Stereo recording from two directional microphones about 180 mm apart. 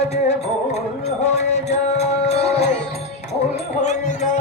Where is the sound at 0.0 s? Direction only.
35° left (ahead or behind).